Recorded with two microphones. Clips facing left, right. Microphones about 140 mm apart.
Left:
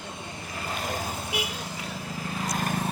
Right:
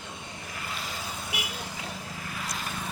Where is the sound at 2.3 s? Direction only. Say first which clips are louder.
Left 8 dB; 45° left (ahead or behind).